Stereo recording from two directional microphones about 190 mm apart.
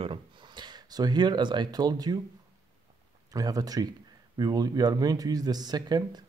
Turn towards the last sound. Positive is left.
turn(degrees=-20)  # may be behind; listen again after turning